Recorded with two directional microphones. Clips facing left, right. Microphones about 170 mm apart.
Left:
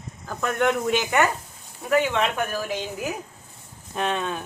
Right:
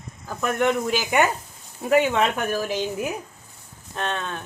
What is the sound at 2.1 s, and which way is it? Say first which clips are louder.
Speech: right 2 dB; 40° right (ahead or behind).